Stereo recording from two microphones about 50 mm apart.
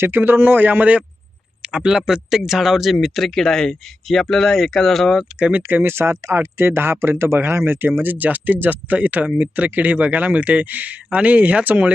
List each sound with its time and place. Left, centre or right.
0.0 s speech: right
1.6 s speech: centre
5.5 s speech: right
5.8 s speech: right
6.4 s speech: right